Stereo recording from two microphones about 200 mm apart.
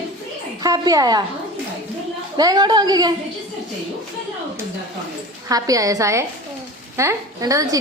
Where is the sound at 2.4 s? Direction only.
20° right (ahead or behind).